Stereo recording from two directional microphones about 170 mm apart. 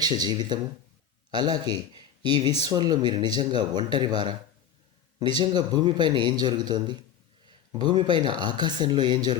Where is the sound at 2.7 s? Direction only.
25° right (ahead or behind).